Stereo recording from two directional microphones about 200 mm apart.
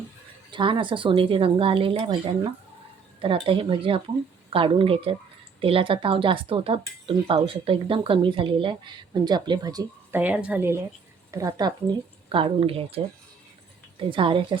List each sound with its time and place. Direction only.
0.5 s a woman's voice: 25° right (ahead or behind)
14.1 s speech: 25° right (ahead or behind)